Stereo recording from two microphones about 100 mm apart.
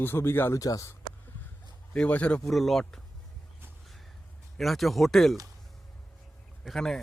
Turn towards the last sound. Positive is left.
turn(degrees=5)  # may be behind; listen again after turning